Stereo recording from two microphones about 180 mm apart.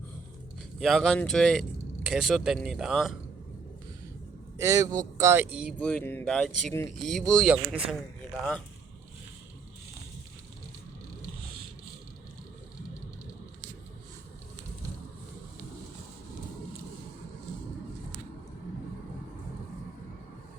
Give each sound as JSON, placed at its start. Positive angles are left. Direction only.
{"t": 0.8, "sound": "speech", "side_deg": 0}
{"t": 4.5, "sound": "a man's voice", "side_deg": -15}
{"t": 5.8, "sound": "speech", "side_deg": 5}